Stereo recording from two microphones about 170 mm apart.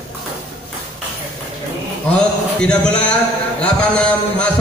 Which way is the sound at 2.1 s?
5° left (ahead or behind).